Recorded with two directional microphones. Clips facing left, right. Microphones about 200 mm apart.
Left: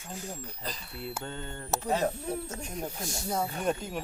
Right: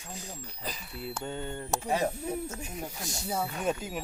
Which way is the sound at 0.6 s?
5° right (ahead or behind).